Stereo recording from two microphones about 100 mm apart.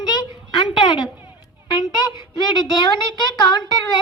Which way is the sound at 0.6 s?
50° left (ahead or behind).